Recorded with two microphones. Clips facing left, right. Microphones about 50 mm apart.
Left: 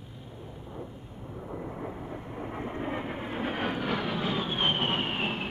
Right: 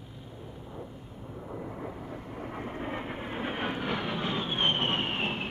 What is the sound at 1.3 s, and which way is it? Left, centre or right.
Vehicle, centre.